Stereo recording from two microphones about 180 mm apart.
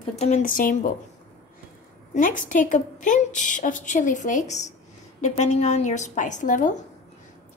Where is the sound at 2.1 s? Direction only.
45° left (ahead or behind).